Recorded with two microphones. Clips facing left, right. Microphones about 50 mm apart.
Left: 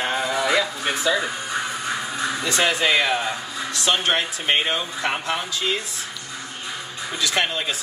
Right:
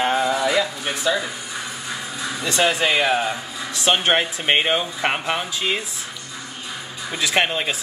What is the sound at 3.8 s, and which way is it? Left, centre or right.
Speech, right.